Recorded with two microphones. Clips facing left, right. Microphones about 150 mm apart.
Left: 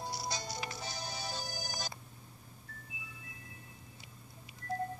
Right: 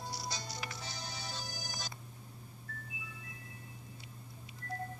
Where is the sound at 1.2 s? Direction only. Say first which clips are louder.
Left 3 dB; 45° left (ahead or behind).